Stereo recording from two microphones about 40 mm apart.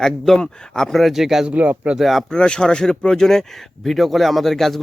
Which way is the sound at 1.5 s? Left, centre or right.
Right.